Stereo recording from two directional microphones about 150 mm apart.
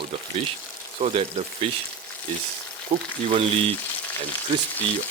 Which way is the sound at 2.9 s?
40° right (ahead or behind).